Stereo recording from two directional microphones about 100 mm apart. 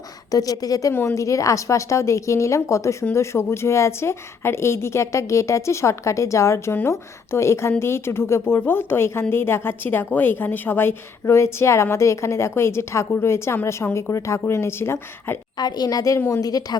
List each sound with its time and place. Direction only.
0.3 s a woman's voice: 35° left (ahead or behind)
15.5 s a woman's voice: 45° left (ahead or behind)